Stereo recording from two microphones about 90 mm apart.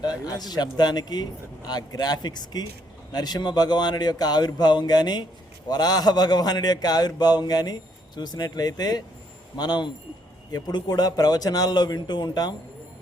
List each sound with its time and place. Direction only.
0.0 s a man's voice: 50° left (ahead or behind)